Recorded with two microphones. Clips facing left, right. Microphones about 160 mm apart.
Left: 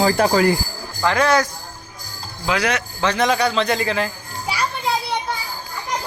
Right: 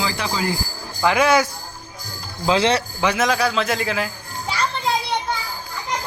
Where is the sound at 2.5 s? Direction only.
25° right (ahead or behind).